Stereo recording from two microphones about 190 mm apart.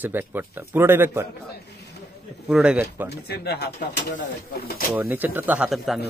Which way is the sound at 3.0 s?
60° left (ahead or behind).